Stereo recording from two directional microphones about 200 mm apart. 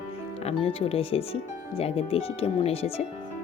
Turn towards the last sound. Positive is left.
turn(degrees=30)  # may be behind; listen again after turning